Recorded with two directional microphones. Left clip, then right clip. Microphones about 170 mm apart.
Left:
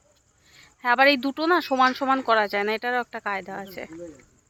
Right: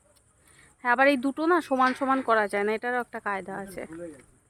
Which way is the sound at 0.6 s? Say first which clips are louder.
Left 3 dB; 10° right (ahead or behind).